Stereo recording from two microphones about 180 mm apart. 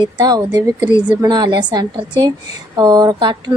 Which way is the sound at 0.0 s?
20° right (ahead or behind).